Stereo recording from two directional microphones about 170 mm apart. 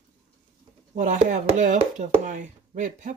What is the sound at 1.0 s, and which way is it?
Speech, 50° right (ahead or behind).